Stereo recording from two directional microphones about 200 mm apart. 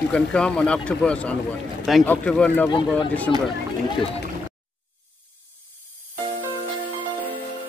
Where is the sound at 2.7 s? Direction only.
25° left (ahead or behind).